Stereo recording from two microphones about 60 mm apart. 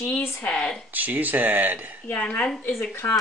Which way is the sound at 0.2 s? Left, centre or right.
Left.